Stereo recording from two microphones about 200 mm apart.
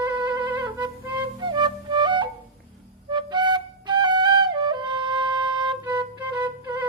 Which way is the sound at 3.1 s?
20° right (ahead or behind).